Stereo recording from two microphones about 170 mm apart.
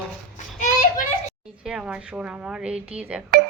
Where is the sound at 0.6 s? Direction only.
50° left (ahead or behind).